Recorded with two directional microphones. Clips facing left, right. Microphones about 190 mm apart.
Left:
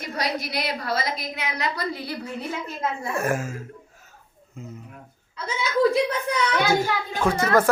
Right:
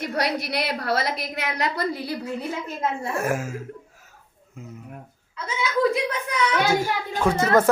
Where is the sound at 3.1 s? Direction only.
5° right (ahead or behind).